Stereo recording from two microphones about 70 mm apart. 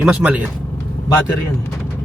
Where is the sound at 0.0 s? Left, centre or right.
Centre.